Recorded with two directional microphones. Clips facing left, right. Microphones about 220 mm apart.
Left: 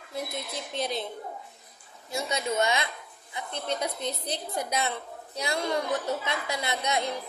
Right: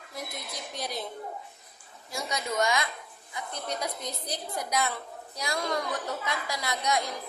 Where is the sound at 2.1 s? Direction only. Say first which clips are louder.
Left 2 dB; 25° left (ahead or behind).